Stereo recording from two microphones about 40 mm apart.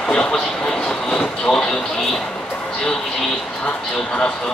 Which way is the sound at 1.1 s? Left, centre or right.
Centre.